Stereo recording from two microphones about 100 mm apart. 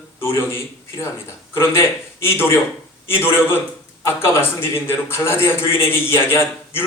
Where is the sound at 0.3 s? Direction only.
25° left (ahead or behind).